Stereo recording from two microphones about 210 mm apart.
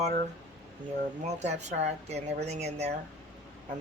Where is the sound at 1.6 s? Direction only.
30° right (ahead or behind).